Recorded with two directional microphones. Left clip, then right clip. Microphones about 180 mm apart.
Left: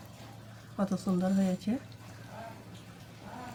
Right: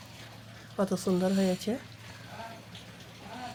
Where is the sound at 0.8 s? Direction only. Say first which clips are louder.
Right 4 dB; 50° right (ahead or behind).